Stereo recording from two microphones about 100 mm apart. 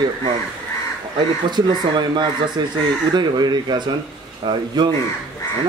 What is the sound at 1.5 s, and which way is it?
Speech, 50° right (ahead or behind).